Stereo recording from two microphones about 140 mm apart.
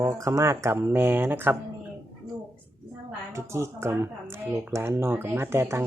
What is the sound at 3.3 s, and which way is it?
Speech, 20° right (ahead or behind).